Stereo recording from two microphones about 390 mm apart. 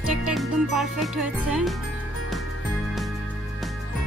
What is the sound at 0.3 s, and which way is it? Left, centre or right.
Speech, centre.